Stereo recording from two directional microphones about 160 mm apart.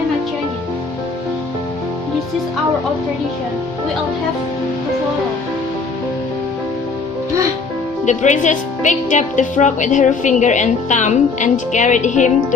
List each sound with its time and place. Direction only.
8.0 s speech: 50° left (ahead or behind)